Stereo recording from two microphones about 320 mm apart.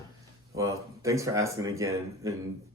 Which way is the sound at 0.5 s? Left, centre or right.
Centre.